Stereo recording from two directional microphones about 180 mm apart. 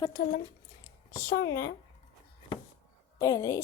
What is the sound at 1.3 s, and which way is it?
Speech, 70° left (ahead or behind).